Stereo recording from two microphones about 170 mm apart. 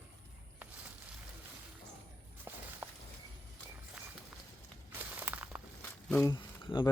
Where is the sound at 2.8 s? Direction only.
10° right (ahead or behind).